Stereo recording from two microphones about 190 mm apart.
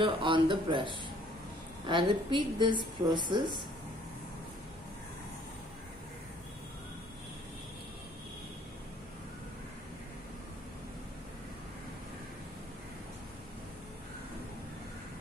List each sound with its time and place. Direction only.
0.0 s a woman's voice: 25° right (ahead or behind)